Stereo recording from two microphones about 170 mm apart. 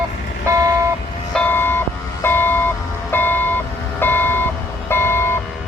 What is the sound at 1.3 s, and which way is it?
Vehicle, 10° left (ahead or behind).